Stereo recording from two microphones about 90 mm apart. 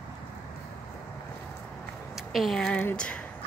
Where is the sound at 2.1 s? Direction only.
Centre (ahead or behind).